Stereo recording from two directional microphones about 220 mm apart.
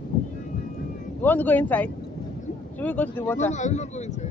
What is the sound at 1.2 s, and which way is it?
Speech, 10° left (ahead or behind).